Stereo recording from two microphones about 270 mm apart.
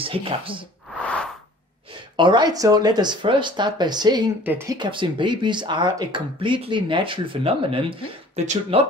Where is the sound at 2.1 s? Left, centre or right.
Centre.